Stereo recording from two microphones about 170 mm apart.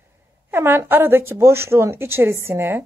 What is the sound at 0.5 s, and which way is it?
A woman's voice, 15° right (ahead or behind).